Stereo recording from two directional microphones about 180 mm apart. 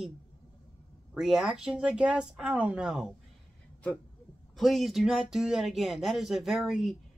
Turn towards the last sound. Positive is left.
turn(degrees=0)  # may be behind; listen again after turning